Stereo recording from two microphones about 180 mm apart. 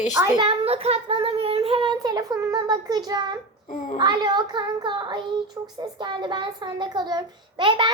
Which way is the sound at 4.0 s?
25° right (ahead or behind).